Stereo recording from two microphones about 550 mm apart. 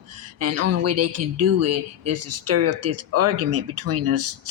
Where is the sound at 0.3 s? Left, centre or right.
Right.